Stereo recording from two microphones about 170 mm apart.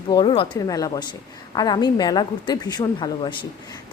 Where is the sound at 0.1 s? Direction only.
30° left (ahead or behind).